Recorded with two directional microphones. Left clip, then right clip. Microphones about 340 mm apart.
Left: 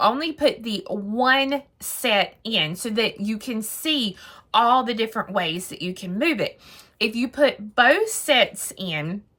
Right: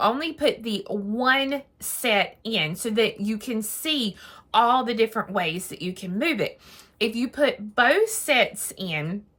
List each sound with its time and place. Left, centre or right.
0.0 s a woman's voice: centre